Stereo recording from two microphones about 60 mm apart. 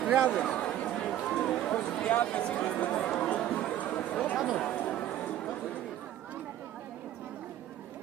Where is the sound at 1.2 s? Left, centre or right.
Centre.